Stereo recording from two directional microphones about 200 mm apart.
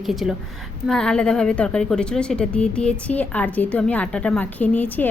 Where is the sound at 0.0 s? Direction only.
Centre (ahead or behind).